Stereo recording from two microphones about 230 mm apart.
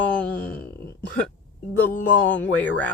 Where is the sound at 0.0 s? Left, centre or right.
Centre.